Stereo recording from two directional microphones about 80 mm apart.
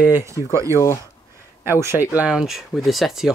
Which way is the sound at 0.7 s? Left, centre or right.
Left.